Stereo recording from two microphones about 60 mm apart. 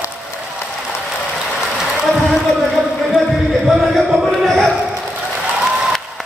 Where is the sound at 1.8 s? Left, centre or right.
Centre.